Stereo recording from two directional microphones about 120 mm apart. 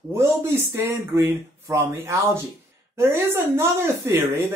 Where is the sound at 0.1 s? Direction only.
20° right (ahead or behind).